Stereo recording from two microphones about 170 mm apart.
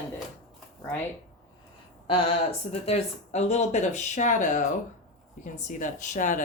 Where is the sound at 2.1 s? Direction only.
35° left (ahead or behind).